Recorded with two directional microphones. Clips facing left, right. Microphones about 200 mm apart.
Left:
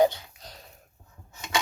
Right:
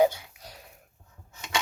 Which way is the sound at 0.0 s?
10° right (ahead or behind).